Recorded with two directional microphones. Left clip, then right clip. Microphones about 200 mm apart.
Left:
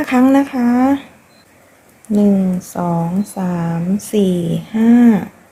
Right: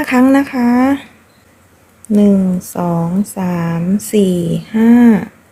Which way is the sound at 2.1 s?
15° right (ahead or behind).